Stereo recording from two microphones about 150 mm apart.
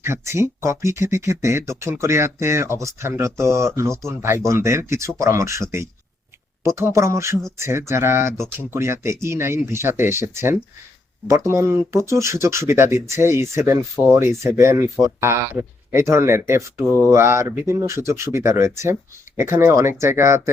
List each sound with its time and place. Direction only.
0.0 s speech: 15° right (ahead or behind)
6.7 s speech: 20° right (ahead or behind)